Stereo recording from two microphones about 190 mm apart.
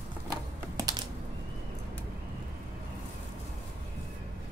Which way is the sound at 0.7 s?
20° right (ahead or behind).